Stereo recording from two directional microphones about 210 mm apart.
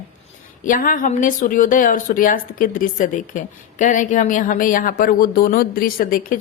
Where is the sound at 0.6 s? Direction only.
40° left (ahead or behind).